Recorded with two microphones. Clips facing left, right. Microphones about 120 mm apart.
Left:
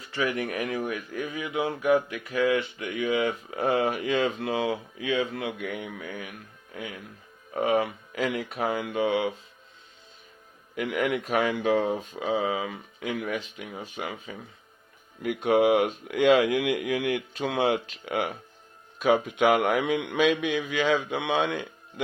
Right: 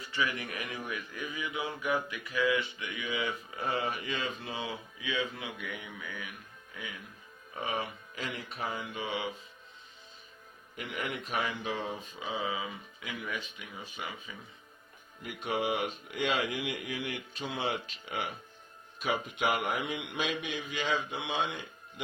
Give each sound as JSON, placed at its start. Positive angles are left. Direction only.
{"t": 0.2, "sound": "speech", "side_deg": 50}
{"t": 1.5, "sound": "mantra", "side_deg": 55}
{"t": 5.3, "sound": "speech", "side_deg": 70}
{"t": 5.8, "sound": "mantra", "side_deg": 55}
{"t": 7.5, "sound": "speech", "side_deg": 55}
{"t": 7.8, "sound": "speech", "side_deg": 80}
{"t": 10.8, "sound": "mantra", "side_deg": 85}
{"t": 13.6, "sound": "speech", "side_deg": 50}
{"t": 15.2, "sound": "speech", "side_deg": 75}